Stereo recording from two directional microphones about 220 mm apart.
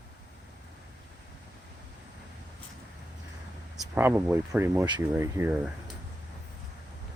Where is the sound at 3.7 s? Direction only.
10° right (ahead or behind).